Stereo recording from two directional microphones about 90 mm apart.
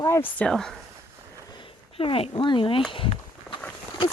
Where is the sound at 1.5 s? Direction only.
75° left (ahead or behind).